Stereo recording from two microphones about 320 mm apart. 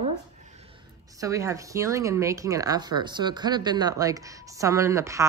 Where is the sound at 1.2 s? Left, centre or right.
Centre.